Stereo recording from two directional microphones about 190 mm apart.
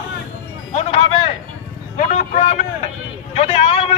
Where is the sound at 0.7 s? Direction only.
35° left (ahead or behind).